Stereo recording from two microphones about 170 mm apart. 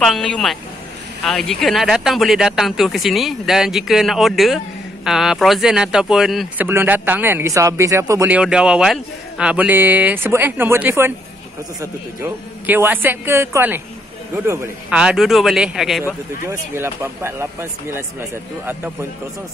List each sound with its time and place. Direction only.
0.0 s a man's voice: 5° left (ahead or behind); by 8.4 s 20° right (ahead or behind)
8.4 s a man's voice: 5° right (ahead or behind)
16.4 s a man's voice: 15° right (ahead or behind)